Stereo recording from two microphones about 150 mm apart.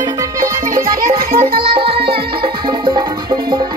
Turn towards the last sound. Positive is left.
turn(degrees=-25)  # may be behind; listen again after turning